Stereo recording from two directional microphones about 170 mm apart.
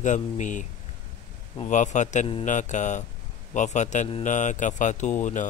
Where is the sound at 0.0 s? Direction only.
45° left (ahead or behind).